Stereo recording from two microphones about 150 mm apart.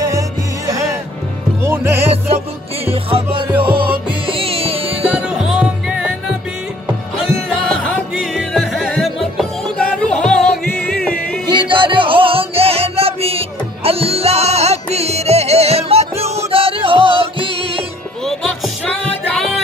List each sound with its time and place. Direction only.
1.6 s music: 15° right (ahead or behind)
2.8 s music: 40° right (ahead or behind)
3.7 s music: 90° right
4.3 s music: 40° right (ahead or behind)
5.0 s music: 5° right (ahead or behind)
7.2 s music: centre (ahead or behind)
11.5 s music: 35° right (ahead or behind)
18.2 s music: centre (ahead or behind)